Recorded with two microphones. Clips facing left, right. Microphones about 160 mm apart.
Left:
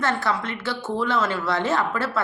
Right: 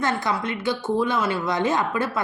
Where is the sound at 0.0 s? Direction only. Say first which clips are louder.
Even; 15° right (ahead or behind).